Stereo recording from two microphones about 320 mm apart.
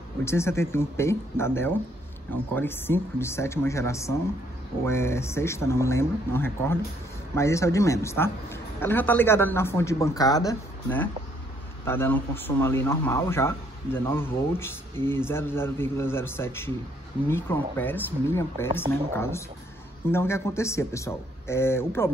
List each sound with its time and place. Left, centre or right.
0.2 s speech: centre